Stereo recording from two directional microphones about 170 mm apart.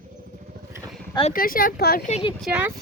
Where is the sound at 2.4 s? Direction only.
10° right (ahead or behind).